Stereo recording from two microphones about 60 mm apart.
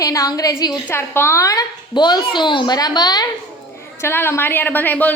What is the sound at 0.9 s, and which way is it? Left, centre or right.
Speech, left.